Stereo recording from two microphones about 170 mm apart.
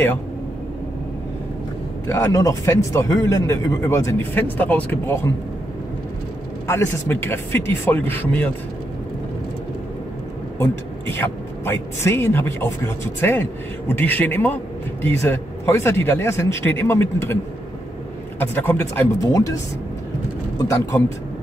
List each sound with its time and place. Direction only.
2.0 s speech: 15° left (ahead or behind)
6.7 s speech: 15° left (ahead or behind)
10.6 s speech: 15° left (ahead or behind)
18.4 s speech: 10° left (ahead or behind)